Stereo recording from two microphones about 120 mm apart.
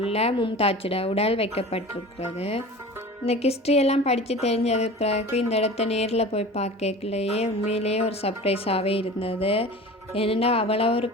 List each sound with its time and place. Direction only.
0.1 s a woman's voice: 60° left (ahead or behind)
0.3 s a woman's voice: 45° left (ahead or behind)
3.2 s a woman's voice: 60° left (ahead or behind)